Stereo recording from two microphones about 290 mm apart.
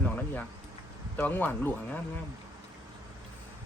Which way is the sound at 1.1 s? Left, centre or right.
Centre.